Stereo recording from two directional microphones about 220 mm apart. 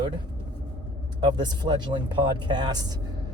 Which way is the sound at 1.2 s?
20° right (ahead or behind).